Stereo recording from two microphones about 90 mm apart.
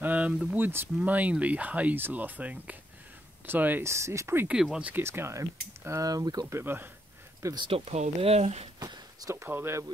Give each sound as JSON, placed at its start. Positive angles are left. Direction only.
{"t": 0.0, "sound": "speech", "side_deg": -15}
{"t": 3.8, "sound": "speech", "side_deg": -30}
{"t": 4.5, "sound": "speech", "side_deg": -10}
{"t": 4.9, "sound": "speech", "side_deg": -25}
{"t": 6.4, "sound": "speech", "side_deg": -25}
{"t": 7.5, "sound": "speech", "side_deg": -80}
{"t": 8.7, "sound": "a sound", "side_deg": -45}
{"t": 9.3, "sound": "speech", "side_deg": -25}